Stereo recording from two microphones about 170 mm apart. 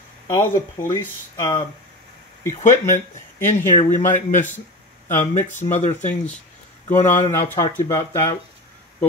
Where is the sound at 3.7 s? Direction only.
45° left (ahead or behind).